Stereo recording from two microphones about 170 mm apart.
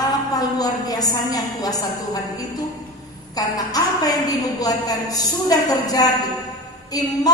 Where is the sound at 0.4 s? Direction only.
20° left (ahead or behind).